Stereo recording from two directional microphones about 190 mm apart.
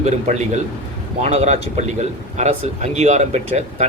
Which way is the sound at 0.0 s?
35° right (ahead or behind).